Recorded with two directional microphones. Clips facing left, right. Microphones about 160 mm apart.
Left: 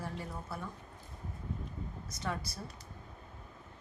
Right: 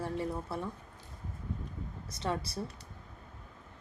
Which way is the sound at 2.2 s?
30° right (ahead or behind).